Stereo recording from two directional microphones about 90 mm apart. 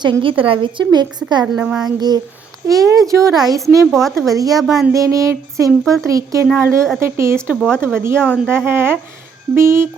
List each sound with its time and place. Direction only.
0.0 s a woman's voice: 70° right (ahead or behind); by 1.5 s 50° right (ahead or behind)
1.5 s a child's voice: 10° right (ahead or behind)
2.0 s speech: 50° right (ahead or behind)
3.9 s speech: centre (ahead or behind)
4.4 s speech: 40° right (ahead or behind)
4.6 s speech: centre (ahead or behind)
4.9 s speech: 35° right (ahead or behind)
5.8 s speech: 5° left (ahead or behind)
6.1 s speech: 35° right (ahead or behind)
7.5 s speech: 5° left (ahead or behind)
8.5 s speech: 25° right (ahead or behind)